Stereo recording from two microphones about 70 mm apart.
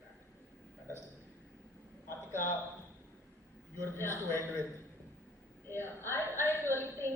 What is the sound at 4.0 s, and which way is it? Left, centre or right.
Speech, left.